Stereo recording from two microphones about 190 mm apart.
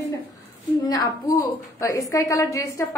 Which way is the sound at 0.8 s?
20° left (ahead or behind).